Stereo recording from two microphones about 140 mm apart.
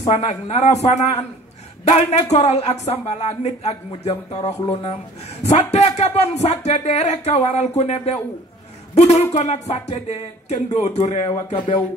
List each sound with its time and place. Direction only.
0.0 s speech: 50° left (ahead or behind)
11.2 s music: 40° left (ahead or behind)